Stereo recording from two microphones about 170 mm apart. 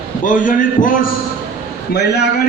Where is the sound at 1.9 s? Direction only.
80° left.